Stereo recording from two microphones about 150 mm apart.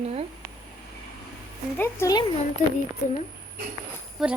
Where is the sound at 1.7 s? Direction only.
15° left (ahead or behind).